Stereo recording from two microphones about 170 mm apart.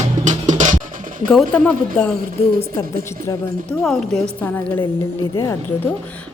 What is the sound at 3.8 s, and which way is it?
A woman's voice, centre (ahead or behind).